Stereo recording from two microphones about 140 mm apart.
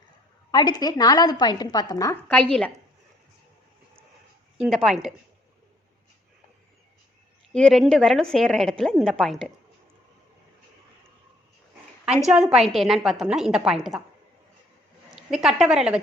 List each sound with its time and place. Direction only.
0.5 s speech: 30° left (ahead or behind)
2.2 s a woman's voice: 10° left (ahead or behind)
4.5 s a woman's voice: centre (ahead or behind)
7.6 s a woman's voice: centre (ahead or behind)
12.3 s a woman's voice: 5° right (ahead or behind)
15.1 s a woman's voice: 5° right (ahead or behind)